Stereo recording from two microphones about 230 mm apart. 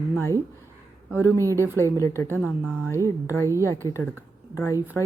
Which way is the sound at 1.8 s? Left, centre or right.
Centre.